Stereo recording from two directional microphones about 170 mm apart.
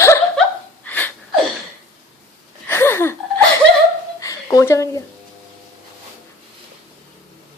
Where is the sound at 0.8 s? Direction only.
10° left (ahead or behind).